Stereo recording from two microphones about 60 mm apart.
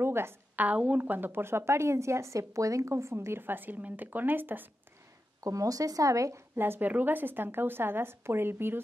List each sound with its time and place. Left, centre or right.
0.0 s a sound: right
0.6 s a woman's voice: right
5.4 s speech: right
6.5 s a woman's voice: right